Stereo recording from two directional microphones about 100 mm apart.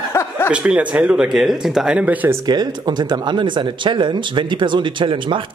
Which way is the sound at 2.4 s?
45° right (ahead or behind).